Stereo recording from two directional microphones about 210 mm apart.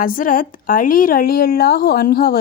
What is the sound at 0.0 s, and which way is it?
A woman's voice, 40° left (ahead or behind).